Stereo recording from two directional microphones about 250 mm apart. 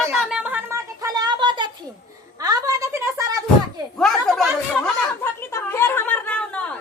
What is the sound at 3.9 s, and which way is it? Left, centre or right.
Speech, centre.